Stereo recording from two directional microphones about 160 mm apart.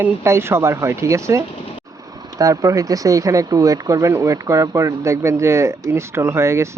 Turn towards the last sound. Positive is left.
turn(degrees=-15)  # may be behind; listen again after turning